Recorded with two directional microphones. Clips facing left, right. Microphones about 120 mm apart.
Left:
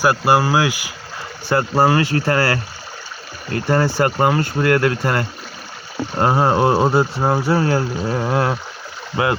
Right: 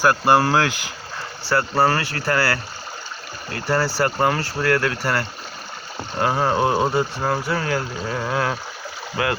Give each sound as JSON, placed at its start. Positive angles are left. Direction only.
{"t": 0.0, "sound": "speech", "side_deg": 10}
{"t": 3.7, "sound": "speech", "side_deg": 25}